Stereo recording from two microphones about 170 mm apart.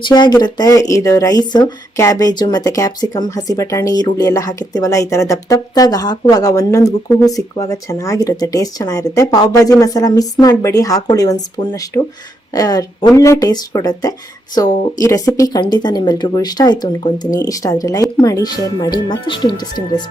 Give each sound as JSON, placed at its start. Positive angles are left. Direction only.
{"t": 0.0, "sound": "speech", "side_deg": 25}